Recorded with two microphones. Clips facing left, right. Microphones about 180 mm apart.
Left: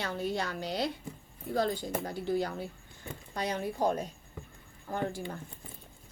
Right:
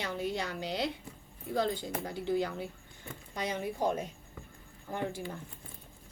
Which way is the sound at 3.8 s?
35° left (ahead or behind).